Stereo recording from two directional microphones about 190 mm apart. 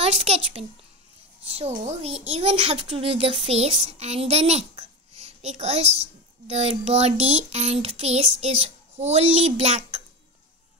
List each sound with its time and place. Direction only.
0.0 s a child's voice: 30° right (ahead or behind)
1.9 s a child's voice: 35° right (ahead or behind)